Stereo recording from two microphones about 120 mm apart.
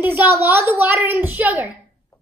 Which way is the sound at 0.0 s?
15° right (ahead or behind).